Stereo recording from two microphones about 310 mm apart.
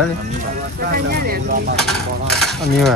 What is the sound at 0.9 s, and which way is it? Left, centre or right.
Speech, right.